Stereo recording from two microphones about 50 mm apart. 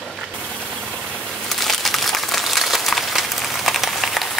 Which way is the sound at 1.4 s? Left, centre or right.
Centre.